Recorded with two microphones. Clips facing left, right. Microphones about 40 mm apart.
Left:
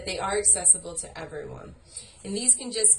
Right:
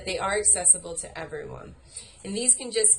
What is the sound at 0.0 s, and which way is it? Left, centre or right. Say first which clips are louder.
A woman's voice: right 1 dB; right.